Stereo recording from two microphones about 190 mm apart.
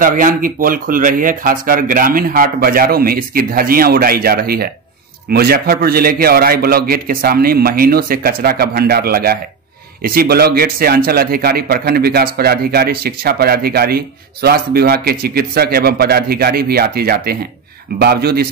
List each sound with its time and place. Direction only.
0.0 s a man's voice: 45° right (ahead or behind)